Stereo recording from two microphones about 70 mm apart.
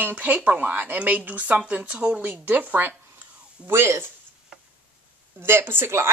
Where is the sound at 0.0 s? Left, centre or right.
Right.